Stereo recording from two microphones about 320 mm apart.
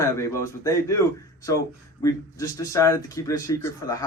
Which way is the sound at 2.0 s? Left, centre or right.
Centre.